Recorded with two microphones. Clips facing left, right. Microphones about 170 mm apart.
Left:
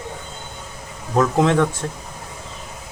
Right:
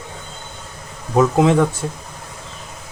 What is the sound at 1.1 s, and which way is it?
Speech, 5° right (ahead or behind).